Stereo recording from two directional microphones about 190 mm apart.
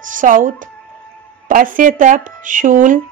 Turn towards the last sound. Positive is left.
turn(degrees=-45)  # may be behind; listen again after turning